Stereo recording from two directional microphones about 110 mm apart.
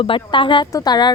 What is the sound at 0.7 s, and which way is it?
Speech, 40° left (ahead or behind).